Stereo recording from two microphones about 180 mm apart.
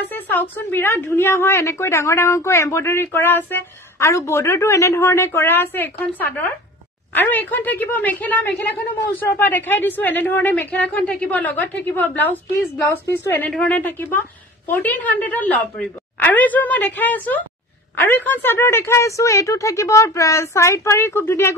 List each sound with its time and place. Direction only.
0.1 s a woman's voice: 10° left (ahead or behind)